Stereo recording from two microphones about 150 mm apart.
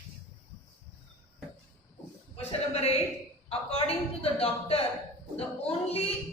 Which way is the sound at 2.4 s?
45° left (ahead or behind).